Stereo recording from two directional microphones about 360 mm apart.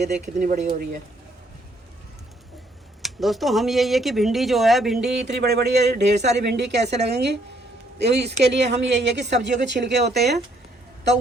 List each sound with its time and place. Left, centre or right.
0.0 s speech: centre
3.0 s speech: centre
5.4 s speech: right